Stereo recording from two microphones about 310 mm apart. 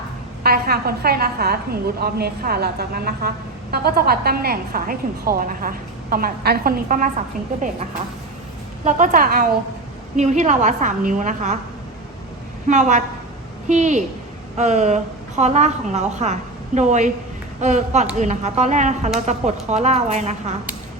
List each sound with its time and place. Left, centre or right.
0.4 s speech: right
8.8 s speech: right
12.6 s speech: right